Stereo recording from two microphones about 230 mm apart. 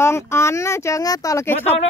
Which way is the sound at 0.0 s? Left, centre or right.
Centre.